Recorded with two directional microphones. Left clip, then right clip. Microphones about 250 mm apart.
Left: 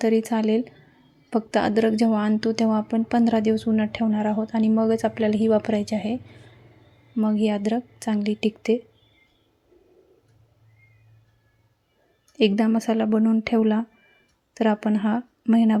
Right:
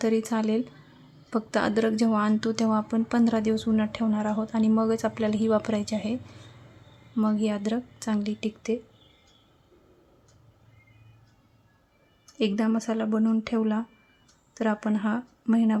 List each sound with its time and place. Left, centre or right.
0.0 s a woman's voice: centre
7.2 s a woman's voice: centre
12.4 s a woman's voice: centre